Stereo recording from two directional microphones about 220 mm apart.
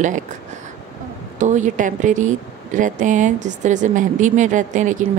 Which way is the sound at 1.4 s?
35° right (ahead or behind).